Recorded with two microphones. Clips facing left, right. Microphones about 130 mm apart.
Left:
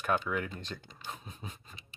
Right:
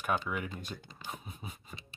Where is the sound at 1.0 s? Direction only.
10° right (ahead or behind).